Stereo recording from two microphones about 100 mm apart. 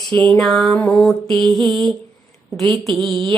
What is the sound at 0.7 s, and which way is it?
Mantra, 15° left (ahead or behind).